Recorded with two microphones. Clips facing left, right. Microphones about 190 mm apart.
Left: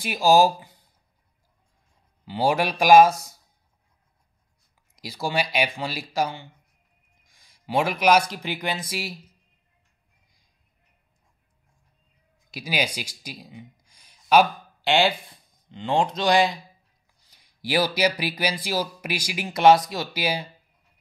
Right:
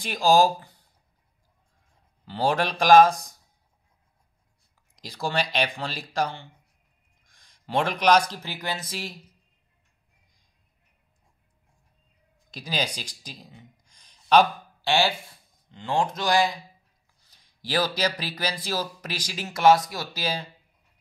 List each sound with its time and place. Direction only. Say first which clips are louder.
0.0 s speech: left 2 dB; 5° left (ahead or behind)
2.2 s speech: left 2 dB; 10° left (ahead or behind)
4.9 s speech: left 1 dB; 5° left (ahead or behind)
12.4 s speech: left 2 dB; 10° left (ahead or behind)
14.9 s speech: left 2 dB; 20° left (ahead or behind)